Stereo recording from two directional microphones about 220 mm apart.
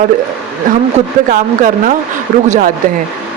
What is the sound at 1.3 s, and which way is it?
Speech, 35° right (ahead or behind).